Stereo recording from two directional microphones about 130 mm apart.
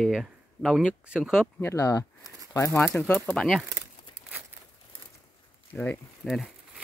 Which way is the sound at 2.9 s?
5° left (ahead or behind).